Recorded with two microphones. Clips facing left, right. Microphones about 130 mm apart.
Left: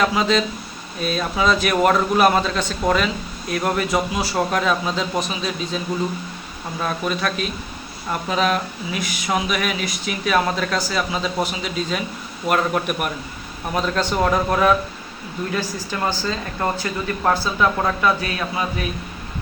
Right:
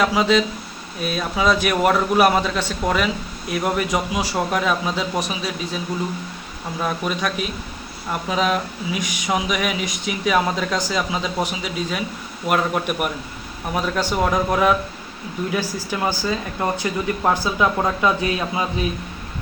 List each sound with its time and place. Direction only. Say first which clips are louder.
0.0 s speech: right 1 dB; 10° right (ahead or behind)